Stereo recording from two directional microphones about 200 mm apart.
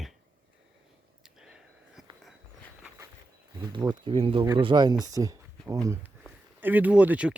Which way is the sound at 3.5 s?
20° right (ahead or behind).